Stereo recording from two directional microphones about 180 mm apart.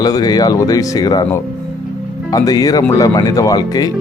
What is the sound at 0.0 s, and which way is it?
Speech, 20° left (ahead or behind).